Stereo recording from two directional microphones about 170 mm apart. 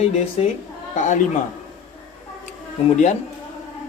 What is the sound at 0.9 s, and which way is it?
Speech, 45° left (ahead or behind).